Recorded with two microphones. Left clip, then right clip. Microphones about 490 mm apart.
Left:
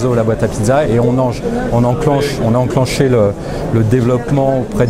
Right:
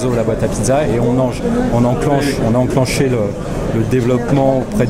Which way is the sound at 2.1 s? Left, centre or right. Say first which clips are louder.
Left 1 dB; left.